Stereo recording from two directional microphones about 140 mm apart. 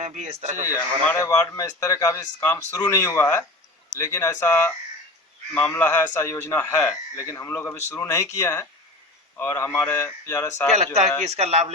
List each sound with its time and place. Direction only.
0.0 s speech: 60° right (ahead or behind)
1.3 s a man's voice: 25° left (ahead or behind)
10.8 s speech: 55° right (ahead or behind)